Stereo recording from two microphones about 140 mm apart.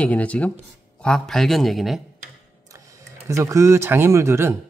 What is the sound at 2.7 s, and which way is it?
Music, 25° right (ahead or behind).